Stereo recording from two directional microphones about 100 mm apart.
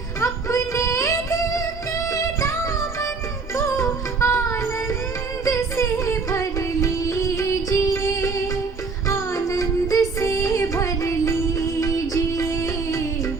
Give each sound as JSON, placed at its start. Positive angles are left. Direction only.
{"t": 0.2, "sound": "music", "side_deg": 30}